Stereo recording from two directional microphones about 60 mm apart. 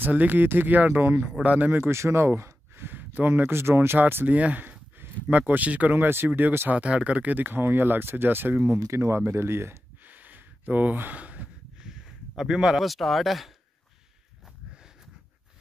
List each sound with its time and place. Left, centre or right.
0.0 s a man's voice: right
4.3 s a sound: right
5.5 s speech: right
6.0 s speech: right
6.7 s speech: centre; by 8.7 s right
8.7 s speech: right
10.0 s gasp: right
11.8 s speech: centre